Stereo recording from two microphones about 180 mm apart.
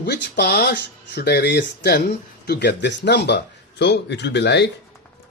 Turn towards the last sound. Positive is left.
turn(degrees=70)  # may be behind; listen again after turning